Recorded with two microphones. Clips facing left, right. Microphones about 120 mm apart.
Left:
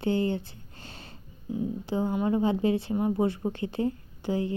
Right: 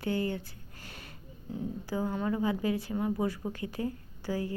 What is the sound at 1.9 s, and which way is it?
A woman's voice, 25° left (ahead or behind).